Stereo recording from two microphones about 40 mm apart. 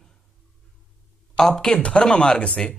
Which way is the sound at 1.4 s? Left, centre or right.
Left.